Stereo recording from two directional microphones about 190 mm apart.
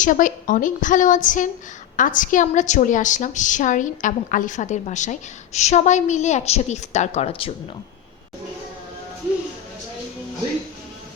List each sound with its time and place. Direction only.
0.0 s a woman's voice: 45° left (ahead or behind)